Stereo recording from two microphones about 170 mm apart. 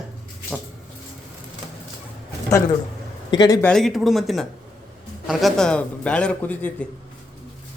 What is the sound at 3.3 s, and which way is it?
Speech, 25° left (ahead or behind).